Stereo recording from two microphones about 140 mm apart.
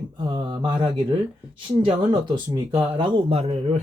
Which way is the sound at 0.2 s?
35° right (ahead or behind).